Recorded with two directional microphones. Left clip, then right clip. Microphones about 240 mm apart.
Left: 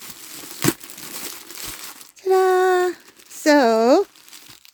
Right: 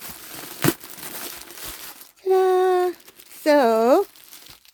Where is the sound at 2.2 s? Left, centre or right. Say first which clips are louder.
Left 2 dB; left.